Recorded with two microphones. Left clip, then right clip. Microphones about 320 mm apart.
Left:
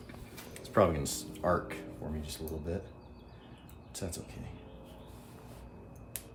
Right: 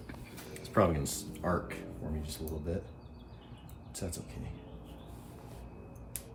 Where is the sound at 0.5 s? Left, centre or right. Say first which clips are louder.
Left 1 dB; centre.